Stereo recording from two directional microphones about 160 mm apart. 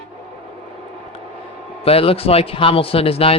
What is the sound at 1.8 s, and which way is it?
A man's voice, 35° left (ahead or behind).